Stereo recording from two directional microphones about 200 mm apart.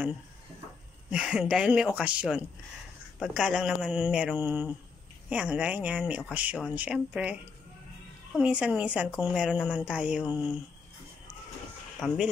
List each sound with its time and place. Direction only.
1.1 s speech: 5° right (ahead or behind)
8.4 s speech: 5° right (ahead or behind)
12.0 s speech: centre (ahead or behind)